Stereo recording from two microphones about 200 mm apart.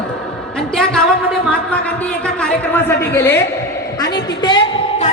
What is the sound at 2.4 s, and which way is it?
A man's voice, 10° left (ahead or behind).